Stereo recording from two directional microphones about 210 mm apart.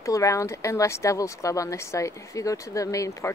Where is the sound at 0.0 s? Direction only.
15° left (ahead or behind).